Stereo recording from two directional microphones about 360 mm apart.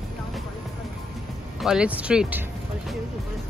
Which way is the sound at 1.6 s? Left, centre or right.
Centre.